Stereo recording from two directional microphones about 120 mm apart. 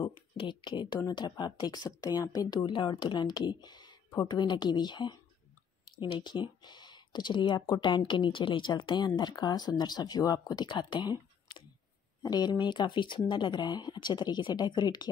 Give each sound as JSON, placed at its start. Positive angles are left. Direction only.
{"t": 0.4, "sound": "speech", "side_deg": 40}